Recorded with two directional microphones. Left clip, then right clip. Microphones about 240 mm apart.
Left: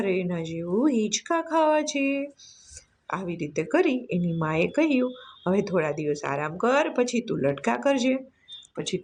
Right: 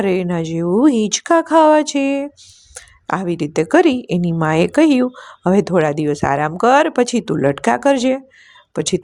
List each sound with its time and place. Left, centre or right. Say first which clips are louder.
0.0 s a woman's voice: right 9 dB; right